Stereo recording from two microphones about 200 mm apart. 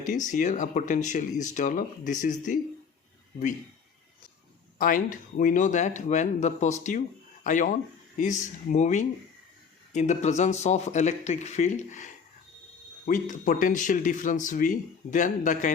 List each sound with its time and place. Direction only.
0.0 s speech: 40° left (ahead or behind)
4.8 s speech: 45° left (ahead or behind)